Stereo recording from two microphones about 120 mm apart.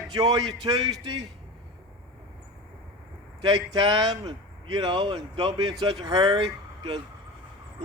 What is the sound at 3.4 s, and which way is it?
Speech, 35° right (ahead or behind).